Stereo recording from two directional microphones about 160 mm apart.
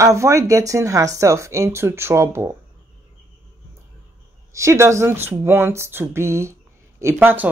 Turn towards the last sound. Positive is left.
turn(degrees=-10)  # may be behind; listen again after turning